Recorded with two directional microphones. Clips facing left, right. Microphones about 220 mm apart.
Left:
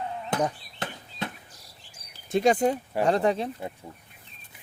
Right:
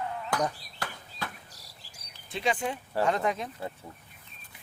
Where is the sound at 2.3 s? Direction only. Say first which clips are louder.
Left 9 dB; 45° left (ahead or behind).